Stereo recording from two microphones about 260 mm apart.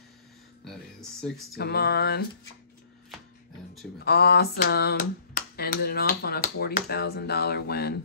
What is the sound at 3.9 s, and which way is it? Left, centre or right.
Speech, left.